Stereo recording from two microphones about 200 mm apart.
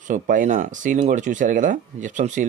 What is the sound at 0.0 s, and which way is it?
Speech, 40° right (ahead or behind).